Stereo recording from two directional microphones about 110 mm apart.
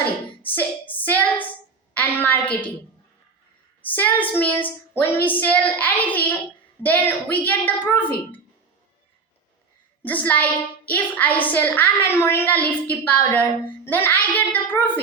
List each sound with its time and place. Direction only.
0.0 s hands: 15° left (ahead or behind)
1.9 s a sound: 15° left (ahead or behind)
3.8 s a woman's voice: 15° left (ahead or behind)
10.0 s a woman's voice: 15° left (ahead or behind)